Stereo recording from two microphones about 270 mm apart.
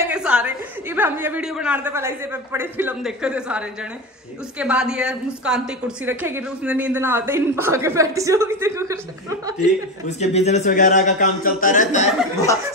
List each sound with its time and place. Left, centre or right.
0.0 s a woman's voice: centre
9.6 s a man's voice: left